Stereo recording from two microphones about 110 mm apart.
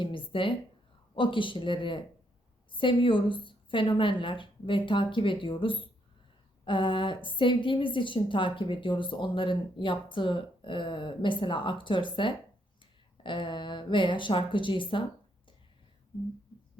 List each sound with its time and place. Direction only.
0.0 s a woman's voice: 50° left (ahead or behind)